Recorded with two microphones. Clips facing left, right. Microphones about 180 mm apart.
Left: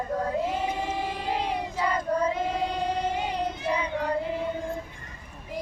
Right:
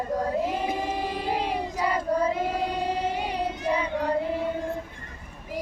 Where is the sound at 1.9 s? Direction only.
10° right (ahead or behind).